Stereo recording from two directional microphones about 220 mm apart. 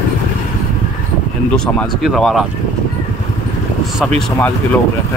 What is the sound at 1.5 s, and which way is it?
Speech, centre (ahead or behind).